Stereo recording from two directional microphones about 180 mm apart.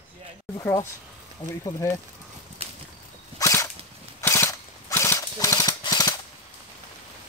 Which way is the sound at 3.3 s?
15° left (ahead or behind).